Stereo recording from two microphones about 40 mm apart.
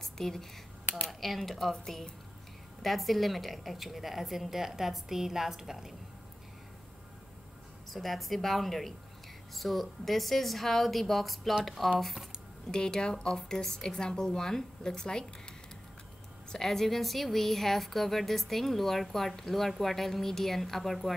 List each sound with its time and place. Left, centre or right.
0.0 s a sound: centre
1.0 s a woman's voice: centre
7.9 s a woman's voice: centre
12.7 s a woman's voice: centre
16.4 s a woman's voice: centre